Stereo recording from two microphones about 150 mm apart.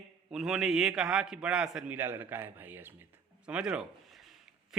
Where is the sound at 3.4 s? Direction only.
5° right (ahead or behind).